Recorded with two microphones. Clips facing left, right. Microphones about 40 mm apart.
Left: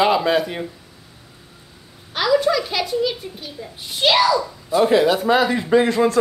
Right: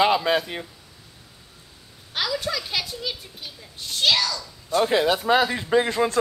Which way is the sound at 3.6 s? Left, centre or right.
Centre.